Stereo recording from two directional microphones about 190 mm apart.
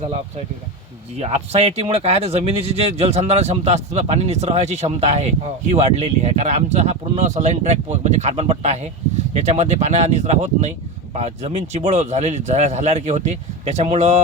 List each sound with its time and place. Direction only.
1.2 s speech: 35° right (ahead or behind)